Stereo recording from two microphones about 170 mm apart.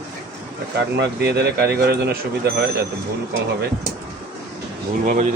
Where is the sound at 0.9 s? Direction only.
75° right (ahead or behind).